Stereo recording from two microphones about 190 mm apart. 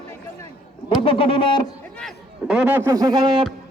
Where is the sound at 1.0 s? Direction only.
30° left (ahead or behind).